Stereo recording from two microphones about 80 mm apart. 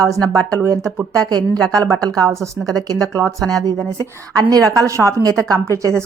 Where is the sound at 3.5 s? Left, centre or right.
Right.